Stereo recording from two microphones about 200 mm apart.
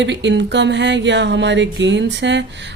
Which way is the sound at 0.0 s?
60° right (ahead or behind).